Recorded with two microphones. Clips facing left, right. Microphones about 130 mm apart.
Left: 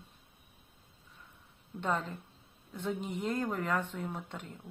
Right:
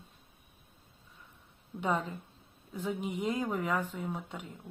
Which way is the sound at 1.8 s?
10° right (ahead or behind).